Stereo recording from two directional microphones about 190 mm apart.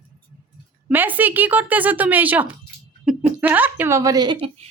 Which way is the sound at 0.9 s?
10° right (ahead or behind).